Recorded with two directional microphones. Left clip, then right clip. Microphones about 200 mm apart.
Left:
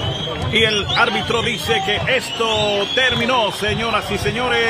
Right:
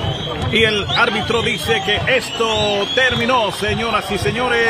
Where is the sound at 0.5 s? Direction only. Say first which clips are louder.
Right 1 dB; 10° right (ahead or behind).